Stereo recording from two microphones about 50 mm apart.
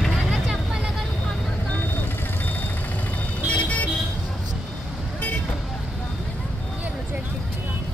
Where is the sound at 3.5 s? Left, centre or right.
Left.